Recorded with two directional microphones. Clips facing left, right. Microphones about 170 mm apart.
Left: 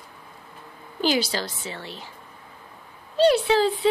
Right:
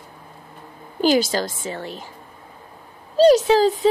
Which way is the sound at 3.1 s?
40° right (ahead or behind).